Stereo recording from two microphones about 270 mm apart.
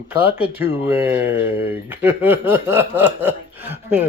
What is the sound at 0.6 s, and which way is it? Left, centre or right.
Speech, centre.